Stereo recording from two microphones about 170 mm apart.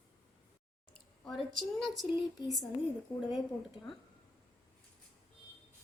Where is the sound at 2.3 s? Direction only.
20° left (ahead or behind).